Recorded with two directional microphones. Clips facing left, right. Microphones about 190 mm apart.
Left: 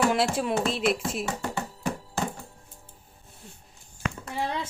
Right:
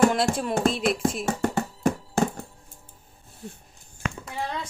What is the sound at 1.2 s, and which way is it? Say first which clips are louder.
Music: right 5 dB; 45° right (ahead or behind).